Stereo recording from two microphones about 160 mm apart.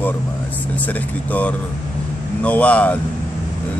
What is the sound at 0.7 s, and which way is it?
Speech, 10° left (ahead or behind).